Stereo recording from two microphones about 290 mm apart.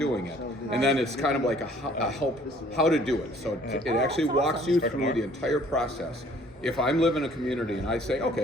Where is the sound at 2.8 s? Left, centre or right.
Centre.